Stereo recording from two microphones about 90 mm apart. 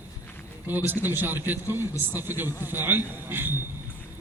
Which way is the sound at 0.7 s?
20° right (ahead or behind).